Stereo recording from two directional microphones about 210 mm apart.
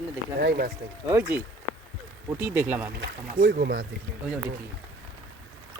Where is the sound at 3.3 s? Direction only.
45° right (ahead or behind).